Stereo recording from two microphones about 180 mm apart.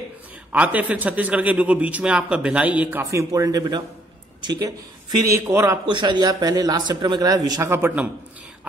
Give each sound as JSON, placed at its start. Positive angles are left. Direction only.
{"t": 0.5, "sound": "a man's voice", "side_deg": -10}